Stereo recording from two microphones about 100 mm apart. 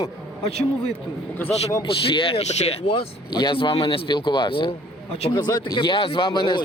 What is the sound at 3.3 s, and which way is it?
Speech, 45° left (ahead or behind).